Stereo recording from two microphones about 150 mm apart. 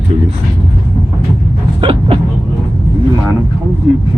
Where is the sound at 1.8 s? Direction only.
35° right (ahead or behind).